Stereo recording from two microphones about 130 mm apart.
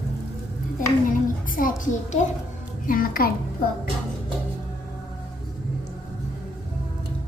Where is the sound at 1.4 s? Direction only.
90° left.